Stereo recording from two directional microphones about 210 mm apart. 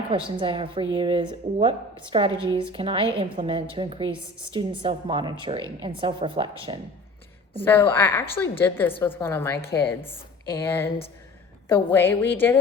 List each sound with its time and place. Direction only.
0.1 s a woman's voice: 25° right (ahead or behind)
7.6 s a woman's voice: 10° left (ahead or behind)